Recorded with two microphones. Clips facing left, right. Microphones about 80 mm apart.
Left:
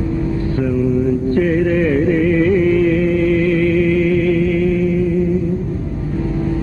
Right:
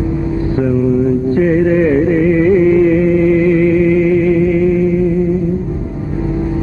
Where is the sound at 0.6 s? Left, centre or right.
Centre.